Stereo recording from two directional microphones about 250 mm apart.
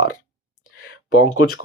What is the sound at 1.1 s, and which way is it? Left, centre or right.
Speech, left.